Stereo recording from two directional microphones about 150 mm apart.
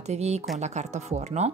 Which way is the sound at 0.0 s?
45° right (ahead or behind).